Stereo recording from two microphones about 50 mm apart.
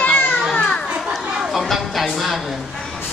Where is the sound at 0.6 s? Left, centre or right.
Centre.